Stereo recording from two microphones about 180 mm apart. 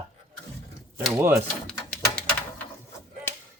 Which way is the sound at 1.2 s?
10° right (ahead or behind).